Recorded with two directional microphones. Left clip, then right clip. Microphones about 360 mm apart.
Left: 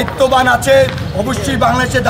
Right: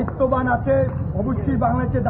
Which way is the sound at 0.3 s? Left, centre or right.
Centre.